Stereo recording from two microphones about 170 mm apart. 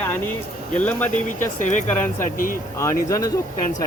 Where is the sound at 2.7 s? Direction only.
20° left (ahead or behind).